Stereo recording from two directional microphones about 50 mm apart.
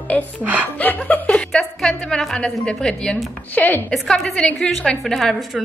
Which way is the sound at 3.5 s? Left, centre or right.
Left.